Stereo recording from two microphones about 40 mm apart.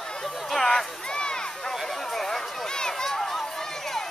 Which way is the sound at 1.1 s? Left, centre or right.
Left.